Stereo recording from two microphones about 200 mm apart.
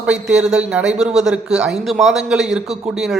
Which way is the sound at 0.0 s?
5° right (ahead or behind).